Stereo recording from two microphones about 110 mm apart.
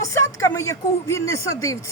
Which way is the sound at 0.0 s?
25° left (ahead or behind).